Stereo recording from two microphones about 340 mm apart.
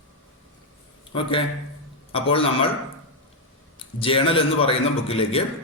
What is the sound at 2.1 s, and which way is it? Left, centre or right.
Speech, centre.